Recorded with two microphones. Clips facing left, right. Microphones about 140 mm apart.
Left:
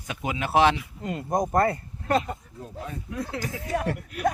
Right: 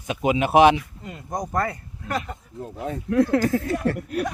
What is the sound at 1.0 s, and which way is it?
Speech, 50° left (ahead or behind).